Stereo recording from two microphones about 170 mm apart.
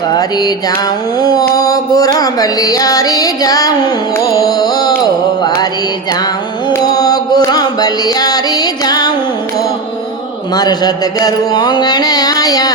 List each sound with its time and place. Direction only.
0.1 s mantra: 25° left (ahead or behind)
4.4 s music: 20° left (ahead or behind)
6.7 s music: 20° left (ahead or behind)
10.5 s mantra: 25° left (ahead or behind)